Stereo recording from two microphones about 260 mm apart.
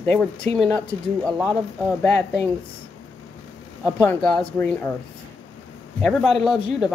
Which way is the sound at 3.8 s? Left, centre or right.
Centre.